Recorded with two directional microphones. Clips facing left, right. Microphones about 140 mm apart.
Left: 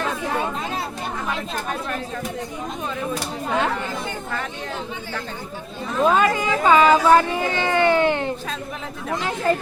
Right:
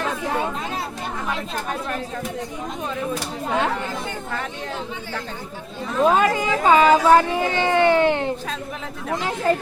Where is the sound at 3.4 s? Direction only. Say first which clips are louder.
Even; 10° right (ahead or behind).